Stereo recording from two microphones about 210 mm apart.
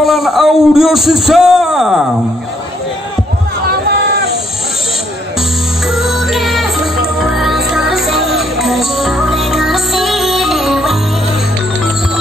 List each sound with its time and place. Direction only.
0.0 s a man's voice: centre (ahead or behind)
3.8 s a sound: 50° right (ahead or behind)
5.9 s music: centre (ahead or behind)